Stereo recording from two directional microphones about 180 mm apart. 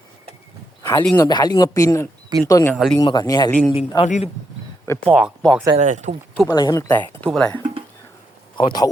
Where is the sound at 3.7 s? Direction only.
35° left (ahead or behind).